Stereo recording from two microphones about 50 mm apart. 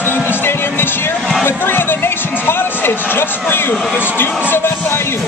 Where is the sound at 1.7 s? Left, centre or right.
Left.